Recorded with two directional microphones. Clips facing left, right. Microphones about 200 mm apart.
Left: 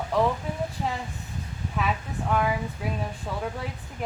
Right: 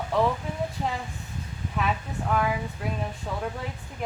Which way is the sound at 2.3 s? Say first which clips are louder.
Left 1 dB; centre (ahead or behind).